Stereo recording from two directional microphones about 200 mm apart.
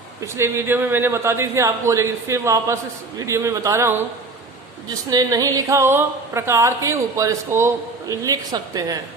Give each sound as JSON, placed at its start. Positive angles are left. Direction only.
{"t": 0.2, "sound": "speech", "side_deg": -15}
{"t": 5.1, "sound": "speech", "side_deg": -15}